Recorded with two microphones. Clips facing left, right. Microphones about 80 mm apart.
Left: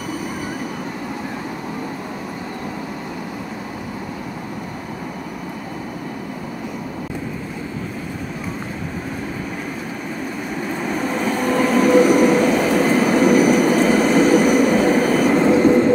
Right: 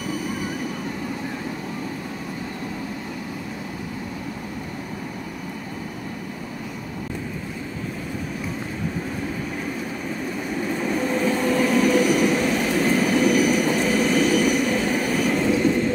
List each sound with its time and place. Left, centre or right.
10.7 s train: left
11.5 s train: left